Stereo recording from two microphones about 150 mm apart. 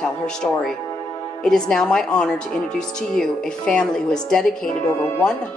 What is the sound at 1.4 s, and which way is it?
Speech, 5° left (ahead or behind).